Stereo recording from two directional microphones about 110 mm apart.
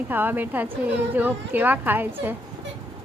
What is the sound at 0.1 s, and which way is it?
A woman's voice, 15° right (ahead or behind).